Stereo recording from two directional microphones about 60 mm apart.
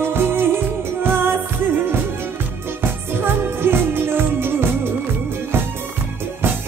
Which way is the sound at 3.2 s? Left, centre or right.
Right.